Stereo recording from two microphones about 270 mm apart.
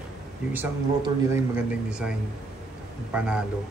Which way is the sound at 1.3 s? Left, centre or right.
Centre.